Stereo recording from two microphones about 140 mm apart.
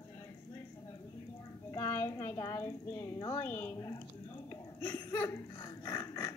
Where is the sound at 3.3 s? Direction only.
15° left (ahead or behind).